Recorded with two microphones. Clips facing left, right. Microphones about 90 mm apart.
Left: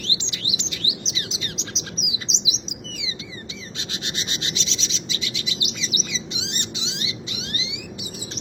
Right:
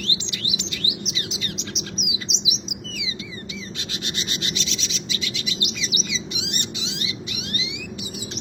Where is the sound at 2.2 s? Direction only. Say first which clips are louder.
Right 1 dB; 25° left (ahead or behind).